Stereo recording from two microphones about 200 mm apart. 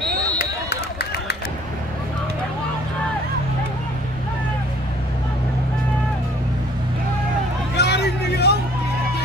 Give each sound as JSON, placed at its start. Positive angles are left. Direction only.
{"t": 0.4, "sound": "run", "side_deg": 55}
{"t": 7.7, "sound": "vehicle", "side_deg": 55}